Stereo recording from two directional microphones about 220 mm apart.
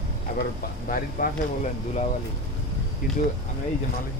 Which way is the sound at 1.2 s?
40° left (ahead or behind).